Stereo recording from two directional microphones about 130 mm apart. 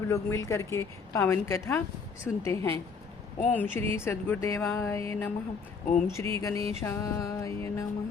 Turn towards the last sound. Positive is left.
turn(degrees=25)  # may be behind; listen again after turning